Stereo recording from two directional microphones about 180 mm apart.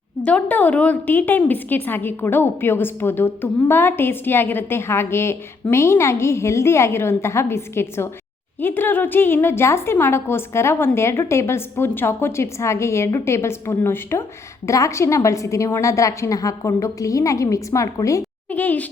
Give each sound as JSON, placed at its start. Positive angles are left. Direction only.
{"t": 0.3, "sound": "a woman's voice", "side_deg": 5}